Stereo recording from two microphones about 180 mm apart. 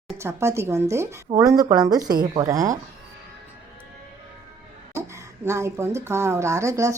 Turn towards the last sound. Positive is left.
turn(degrees=-15)  # may be behind; listen again after turning